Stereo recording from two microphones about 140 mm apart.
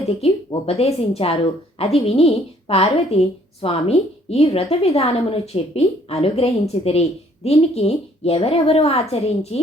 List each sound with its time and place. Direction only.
0.2 s a woman's voice: 45° left (ahead or behind)